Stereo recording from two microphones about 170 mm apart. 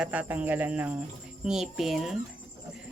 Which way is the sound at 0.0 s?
10° right (ahead or behind).